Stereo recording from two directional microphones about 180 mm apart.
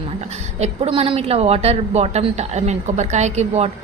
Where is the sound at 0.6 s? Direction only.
30° right (ahead or behind).